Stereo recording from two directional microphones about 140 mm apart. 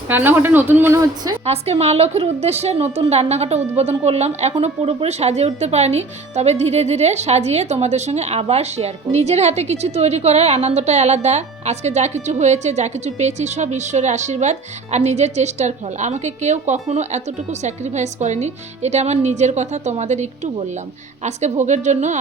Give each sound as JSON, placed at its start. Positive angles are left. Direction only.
{"t": 0.1, "sound": "a woman's voice", "side_deg": -15}
{"t": 1.5, "sound": "a woman's voice", "side_deg": -50}